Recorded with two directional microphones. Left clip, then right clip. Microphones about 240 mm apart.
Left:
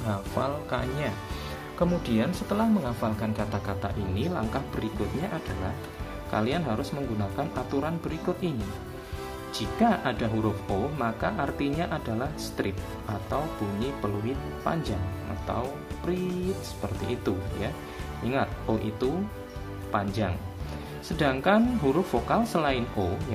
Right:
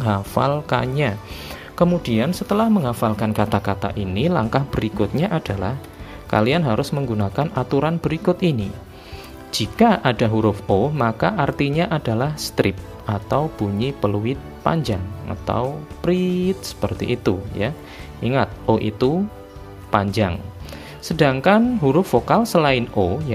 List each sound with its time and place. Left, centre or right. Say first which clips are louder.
0.0 s speech: right 9 dB; right
16.0 s music: right 11 dB; right
16.8 s speech: right 10 dB; right